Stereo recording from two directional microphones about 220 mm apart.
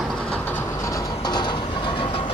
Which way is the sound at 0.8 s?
15° left (ahead or behind).